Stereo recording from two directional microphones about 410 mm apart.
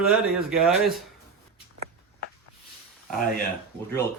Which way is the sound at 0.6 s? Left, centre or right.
Centre.